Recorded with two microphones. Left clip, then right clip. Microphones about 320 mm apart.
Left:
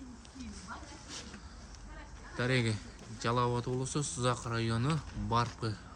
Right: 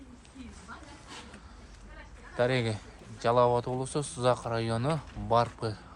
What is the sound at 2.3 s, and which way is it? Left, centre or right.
Speech, centre.